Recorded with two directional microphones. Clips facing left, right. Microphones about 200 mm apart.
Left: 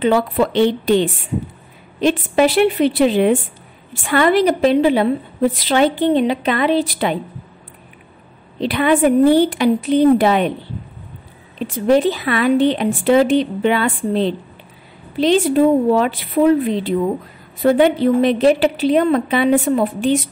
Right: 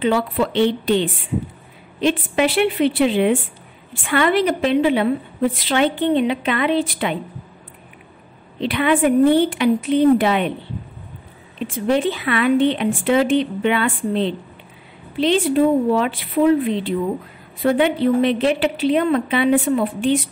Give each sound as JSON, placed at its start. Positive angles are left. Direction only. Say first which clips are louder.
{"t": 0.0, "sound": "a woman's voice", "louder": "left 3 dB", "side_deg": 45}
{"t": 8.5, "sound": "a woman's voice", "louder": "left 2 dB", "side_deg": 40}
{"t": 11.6, "sound": "a woman's voice", "louder": "left 4 dB", "side_deg": 40}